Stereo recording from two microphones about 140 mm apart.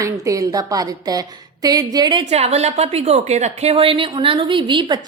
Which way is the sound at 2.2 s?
50° right (ahead or behind).